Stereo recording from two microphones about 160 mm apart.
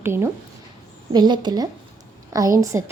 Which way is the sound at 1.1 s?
25° right (ahead or behind).